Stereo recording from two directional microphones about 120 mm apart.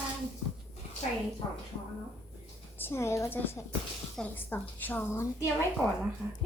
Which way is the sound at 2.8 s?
20° left (ahead or behind).